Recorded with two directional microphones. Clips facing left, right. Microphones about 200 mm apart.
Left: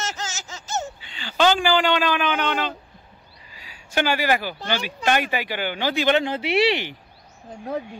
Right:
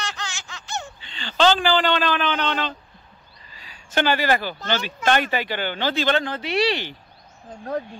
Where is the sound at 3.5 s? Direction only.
10° left (ahead or behind).